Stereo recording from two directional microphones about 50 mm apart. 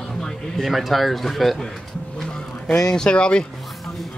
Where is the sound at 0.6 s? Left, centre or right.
Centre.